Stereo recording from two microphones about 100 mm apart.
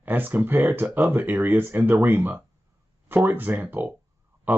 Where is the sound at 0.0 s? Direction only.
20° right (ahead or behind).